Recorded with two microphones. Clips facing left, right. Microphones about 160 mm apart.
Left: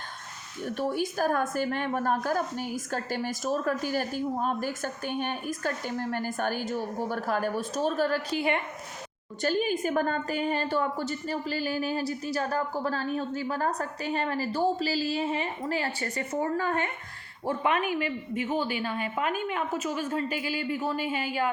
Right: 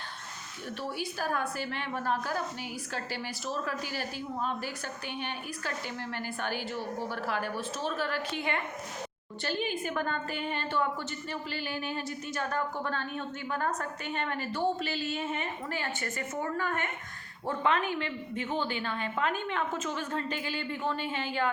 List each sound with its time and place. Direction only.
0.6 s a woman's voice: 45° left (ahead or behind)
17.6 s a woman's voice: 15° left (ahead or behind)